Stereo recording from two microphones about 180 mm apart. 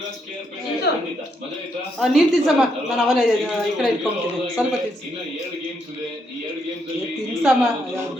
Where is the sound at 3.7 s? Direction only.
Centre (ahead or behind).